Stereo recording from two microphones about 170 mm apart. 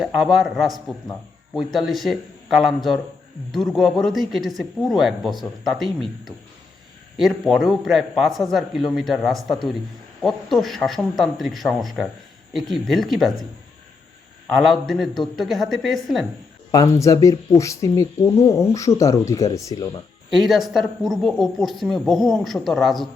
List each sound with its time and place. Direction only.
0.0 s speech: centre (ahead or behind)
14.5 s speech: centre (ahead or behind)
16.7 s speech: 20° left (ahead or behind)
20.3 s speech: centre (ahead or behind)